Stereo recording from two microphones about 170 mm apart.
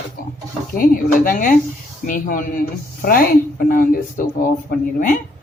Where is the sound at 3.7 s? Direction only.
55° left (ahead or behind).